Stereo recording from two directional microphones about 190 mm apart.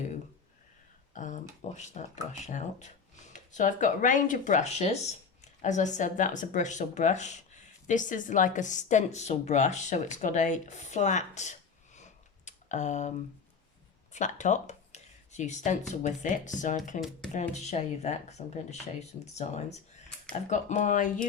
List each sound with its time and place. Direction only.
1.1 s speech: 40° left (ahead or behind)
12.5 s typing: 40° left (ahead or behind)
14.1 s speech: 40° left (ahead or behind)
17.0 s speech: centre (ahead or behind)
17.5 s speech: 35° left (ahead or behind)